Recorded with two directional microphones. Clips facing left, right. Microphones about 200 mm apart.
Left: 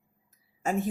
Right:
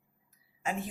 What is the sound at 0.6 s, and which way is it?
Speech, 45° left (ahead or behind).